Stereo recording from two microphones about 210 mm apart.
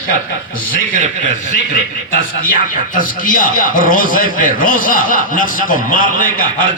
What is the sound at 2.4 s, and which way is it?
Speech, 40° left (ahead or behind).